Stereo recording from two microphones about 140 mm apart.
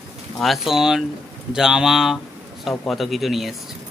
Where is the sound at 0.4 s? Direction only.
Centre (ahead or behind).